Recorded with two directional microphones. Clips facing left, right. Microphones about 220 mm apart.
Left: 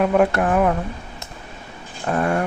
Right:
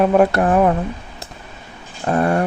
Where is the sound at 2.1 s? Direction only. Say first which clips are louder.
Right 3 dB; 35° right (ahead or behind).